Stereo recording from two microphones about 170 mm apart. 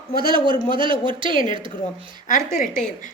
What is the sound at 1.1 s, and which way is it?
Speech, 30° right (ahead or behind).